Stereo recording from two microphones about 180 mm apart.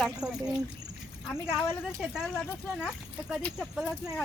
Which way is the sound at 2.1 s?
Centre (ahead or behind).